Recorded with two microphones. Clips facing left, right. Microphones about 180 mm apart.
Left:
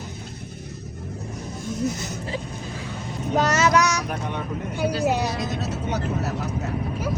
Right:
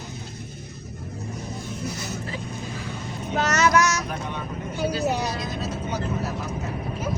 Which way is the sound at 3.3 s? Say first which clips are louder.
Left 1 dB; 30° left (ahead or behind).